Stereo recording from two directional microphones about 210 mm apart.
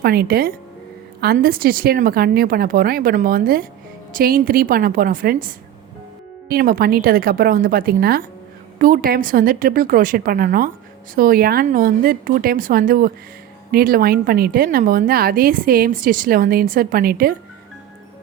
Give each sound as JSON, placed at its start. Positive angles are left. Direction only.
{"t": 0.0, "sound": "a woman's voice", "side_deg": -45}